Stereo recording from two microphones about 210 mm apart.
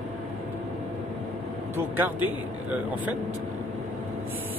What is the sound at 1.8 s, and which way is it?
Speech, 10° right (ahead or behind).